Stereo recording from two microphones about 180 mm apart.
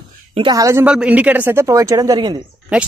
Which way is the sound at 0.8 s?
5° right (ahead or behind).